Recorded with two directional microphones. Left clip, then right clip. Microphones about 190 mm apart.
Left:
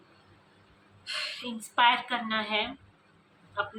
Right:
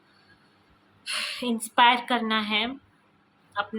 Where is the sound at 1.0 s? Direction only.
60° right (ahead or behind).